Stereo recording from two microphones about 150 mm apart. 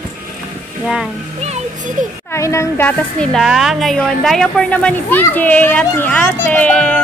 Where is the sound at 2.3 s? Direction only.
20° left (ahead or behind).